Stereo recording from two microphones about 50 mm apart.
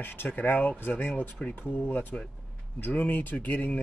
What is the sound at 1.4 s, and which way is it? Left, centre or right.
Speech, left.